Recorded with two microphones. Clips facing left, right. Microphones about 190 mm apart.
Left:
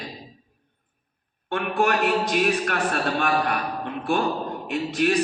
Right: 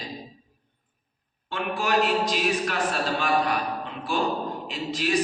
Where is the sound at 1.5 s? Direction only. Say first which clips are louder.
Left 2 dB; 60° left (ahead or behind).